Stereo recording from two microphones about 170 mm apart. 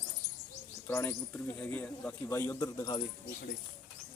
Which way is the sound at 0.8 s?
15° left (ahead or behind).